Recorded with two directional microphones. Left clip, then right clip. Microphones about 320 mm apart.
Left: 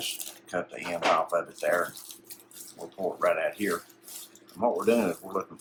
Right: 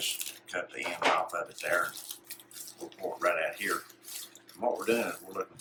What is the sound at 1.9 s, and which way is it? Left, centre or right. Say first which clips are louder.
Bathtub: right 2 dB; centre.